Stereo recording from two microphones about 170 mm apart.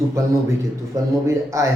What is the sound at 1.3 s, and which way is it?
Speech, 15° right (ahead or behind).